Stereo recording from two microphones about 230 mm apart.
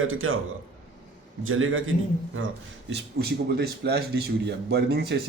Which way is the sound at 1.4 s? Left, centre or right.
Right.